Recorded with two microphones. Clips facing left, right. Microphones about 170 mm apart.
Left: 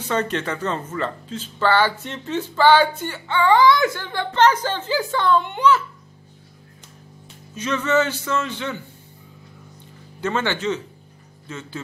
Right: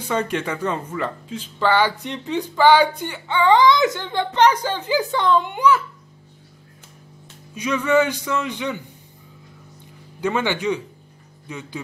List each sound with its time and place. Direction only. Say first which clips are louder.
0.0 s speech: even; 10° right (ahead or behind)
7.5 s speech: right 2 dB; 10° right (ahead or behind)
10.2 s speech: right 1 dB; 15° right (ahead or behind)